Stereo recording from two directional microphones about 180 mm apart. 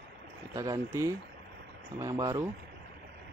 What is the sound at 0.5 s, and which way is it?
Speech, 20° right (ahead or behind).